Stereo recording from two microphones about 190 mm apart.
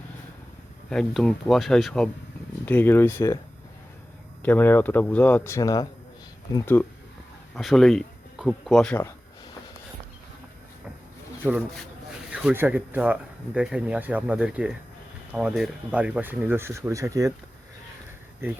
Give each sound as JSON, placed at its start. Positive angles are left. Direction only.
{"t": 0.9, "sound": "speech", "side_deg": 5}
{"t": 4.4, "sound": "speech", "side_deg": 10}
{"t": 7.5, "sound": "speech", "side_deg": 0}
{"t": 12.3, "sound": "speech", "side_deg": -5}